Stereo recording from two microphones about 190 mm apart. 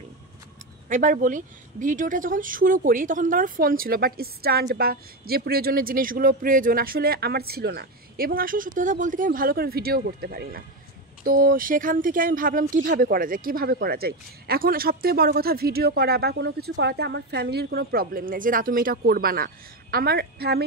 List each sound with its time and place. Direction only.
0.8 s speech: 45° right (ahead or behind)